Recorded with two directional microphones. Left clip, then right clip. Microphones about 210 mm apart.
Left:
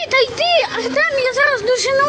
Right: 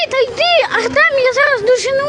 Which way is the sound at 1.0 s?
10° right (ahead or behind).